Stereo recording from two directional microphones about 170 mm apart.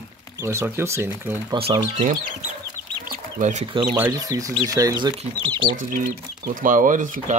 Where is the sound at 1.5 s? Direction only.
35° right (ahead or behind).